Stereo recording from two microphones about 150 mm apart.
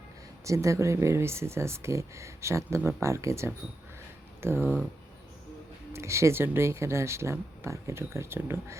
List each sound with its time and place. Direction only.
0.4 s speech: 20° right (ahead or behind)
5.9 s speech: 20° right (ahead or behind)